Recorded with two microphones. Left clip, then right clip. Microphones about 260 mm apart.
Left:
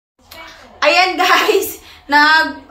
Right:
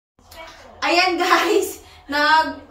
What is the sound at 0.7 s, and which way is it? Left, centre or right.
Speech, centre.